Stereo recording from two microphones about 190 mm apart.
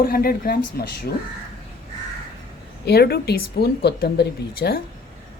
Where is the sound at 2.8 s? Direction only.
60° left (ahead or behind).